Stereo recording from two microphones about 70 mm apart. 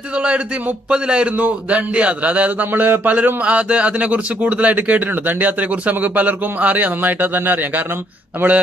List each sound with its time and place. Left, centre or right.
0.1 s a man's voice: centre